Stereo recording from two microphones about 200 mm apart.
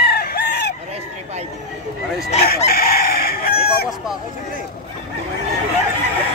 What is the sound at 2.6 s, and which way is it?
Chicken, 50° left (ahead or behind).